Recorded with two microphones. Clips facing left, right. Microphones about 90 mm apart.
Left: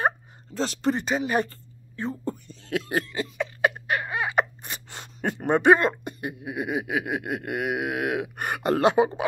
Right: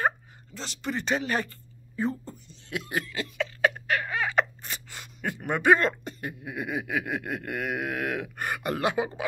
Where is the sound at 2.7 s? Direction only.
35° left (ahead or behind).